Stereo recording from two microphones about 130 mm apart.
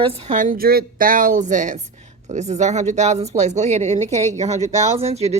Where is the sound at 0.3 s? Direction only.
85° right.